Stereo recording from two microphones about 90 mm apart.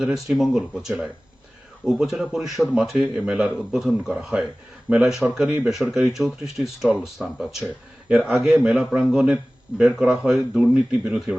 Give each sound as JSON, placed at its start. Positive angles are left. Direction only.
{"t": 0.0, "sound": "a man's voice", "side_deg": 0}
{"t": 9.8, "sound": "speech", "side_deg": 0}